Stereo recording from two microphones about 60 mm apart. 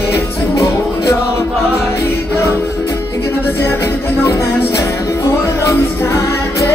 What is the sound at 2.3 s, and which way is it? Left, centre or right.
Music, left.